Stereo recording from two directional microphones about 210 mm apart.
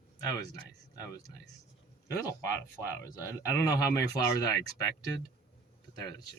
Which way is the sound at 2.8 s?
15° left (ahead or behind).